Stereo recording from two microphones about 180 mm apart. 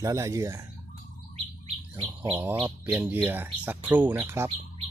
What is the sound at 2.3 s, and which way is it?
Speech, 10° right (ahead or behind).